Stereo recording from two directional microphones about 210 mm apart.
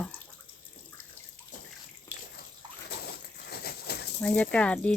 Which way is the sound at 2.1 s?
15° left (ahead or behind).